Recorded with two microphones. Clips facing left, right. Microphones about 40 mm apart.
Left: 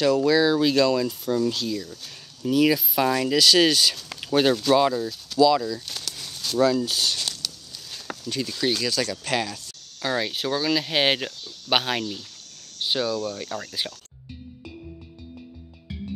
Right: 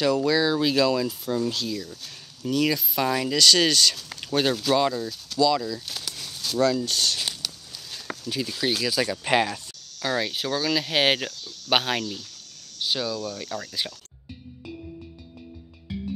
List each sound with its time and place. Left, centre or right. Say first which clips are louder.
0.0 s speech: left 2 dB; centre
7.2 s a sound: even; centre
7.9 s speech: even; centre; by 9.6 s right
10.0 s speech: left 1 dB; centre
12.8 s speech: left 2 dB; centre
13.5 s speech: left 1 dB; left
15.9 s music: right 3 dB; centre